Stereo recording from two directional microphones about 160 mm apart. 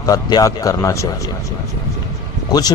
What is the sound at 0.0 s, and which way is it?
Speech, 25° left (ahead or behind).